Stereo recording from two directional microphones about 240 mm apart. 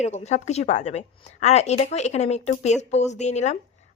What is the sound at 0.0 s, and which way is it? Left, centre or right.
A woman's voice, left.